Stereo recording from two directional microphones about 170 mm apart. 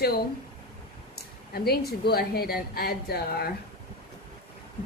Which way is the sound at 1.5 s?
70° left (ahead or behind).